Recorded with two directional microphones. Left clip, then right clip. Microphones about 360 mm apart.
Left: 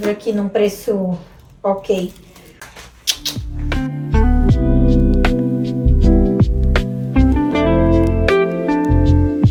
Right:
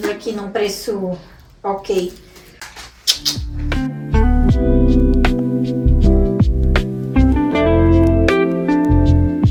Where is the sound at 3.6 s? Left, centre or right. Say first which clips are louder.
Even; centre.